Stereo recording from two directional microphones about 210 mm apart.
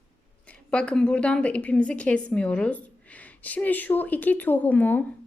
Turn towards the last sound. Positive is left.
turn(degrees=10)  # may be behind; listen again after turning